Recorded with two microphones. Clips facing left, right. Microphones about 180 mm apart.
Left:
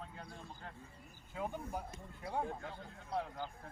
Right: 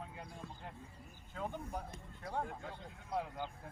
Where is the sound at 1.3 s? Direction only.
10° left (ahead or behind).